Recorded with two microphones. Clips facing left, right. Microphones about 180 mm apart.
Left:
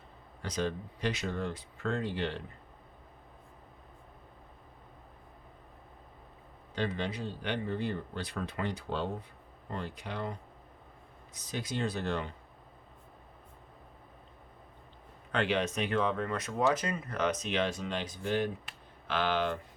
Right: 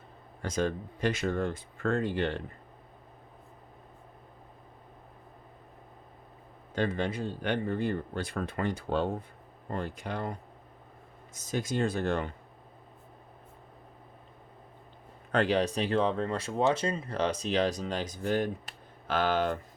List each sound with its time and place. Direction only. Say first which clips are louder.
0.4 s speech: right 3 dB; 50° right (ahead or behind)
6.7 s speech: right 4 dB; 50° right (ahead or behind)
11.3 s speech: right 5 dB; 45° right (ahead or behind)
15.3 s speech: right 4 dB; 40° right (ahead or behind)